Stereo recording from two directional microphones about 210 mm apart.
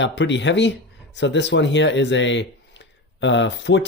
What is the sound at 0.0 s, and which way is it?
Speech, 60° left (ahead or behind).